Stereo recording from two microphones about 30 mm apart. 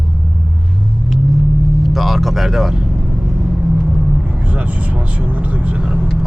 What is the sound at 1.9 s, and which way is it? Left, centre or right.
Vehicle, centre.